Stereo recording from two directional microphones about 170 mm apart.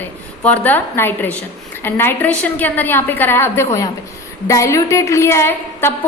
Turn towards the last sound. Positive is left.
turn(degrees=15)  # may be behind; listen again after turning